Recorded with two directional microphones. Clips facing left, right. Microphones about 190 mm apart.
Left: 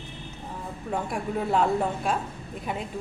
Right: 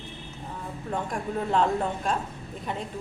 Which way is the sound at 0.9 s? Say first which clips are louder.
Left 1 dB; 10° left (ahead or behind).